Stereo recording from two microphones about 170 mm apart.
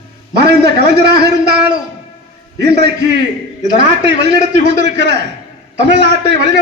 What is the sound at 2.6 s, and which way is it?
Speech, 80° right.